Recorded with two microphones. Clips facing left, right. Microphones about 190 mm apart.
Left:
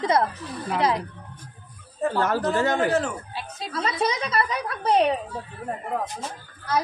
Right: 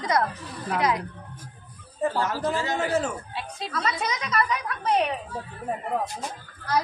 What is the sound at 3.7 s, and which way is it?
A woman's voice, 30° left (ahead or behind).